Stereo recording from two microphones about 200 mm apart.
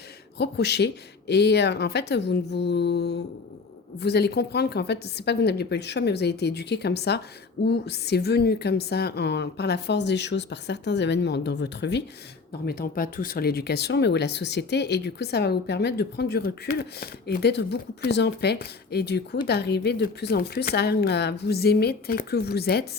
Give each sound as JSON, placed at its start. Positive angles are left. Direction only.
{"t": 0.3, "sound": "speech", "side_deg": 55}
{"t": 12.6, "sound": "a woman's voice", "side_deg": 50}